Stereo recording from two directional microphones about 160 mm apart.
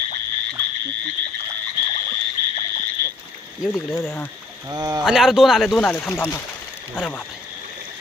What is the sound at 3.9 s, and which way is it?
Speech, 15° left (ahead or behind).